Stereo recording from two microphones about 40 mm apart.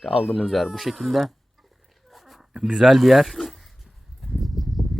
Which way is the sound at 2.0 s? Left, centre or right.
Centre.